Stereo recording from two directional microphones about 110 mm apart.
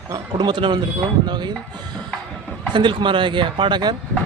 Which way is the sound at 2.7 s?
45° right (ahead or behind).